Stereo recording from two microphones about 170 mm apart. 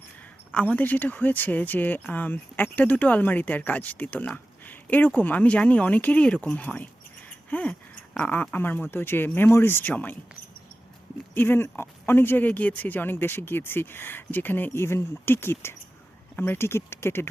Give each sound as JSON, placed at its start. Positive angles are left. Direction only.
{"t": 0.5, "sound": "speech", "side_deg": 10}
{"t": 11.3, "sound": "speech", "side_deg": 10}